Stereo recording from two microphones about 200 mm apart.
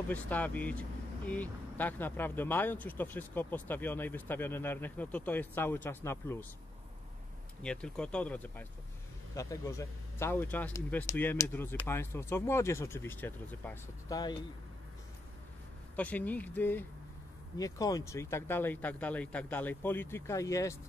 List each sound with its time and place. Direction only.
0.1 s speech: 10° left (ahead or behind)
7.6 s speech: 5° left (ahead or behind)
16.0 s speech: 10° left (ahead or behind)